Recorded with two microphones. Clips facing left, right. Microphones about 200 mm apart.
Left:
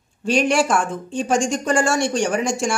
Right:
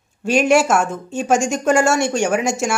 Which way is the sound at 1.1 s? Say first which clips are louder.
Right 2 dB; 5° right (ahead or behind).